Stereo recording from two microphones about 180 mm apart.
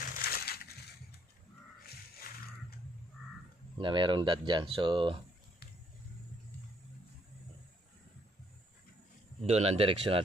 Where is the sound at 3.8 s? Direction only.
25° right (ahead or behind).